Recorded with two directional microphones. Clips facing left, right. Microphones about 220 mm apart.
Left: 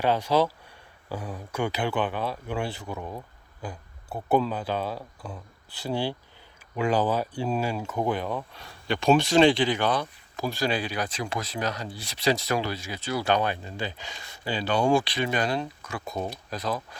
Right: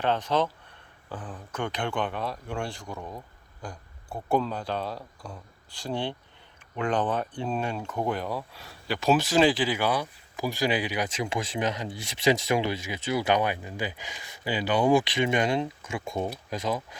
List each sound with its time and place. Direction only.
0.0 s speech: 10° left (ahead or behind); by 17.0 s 15° right (ahead or behind)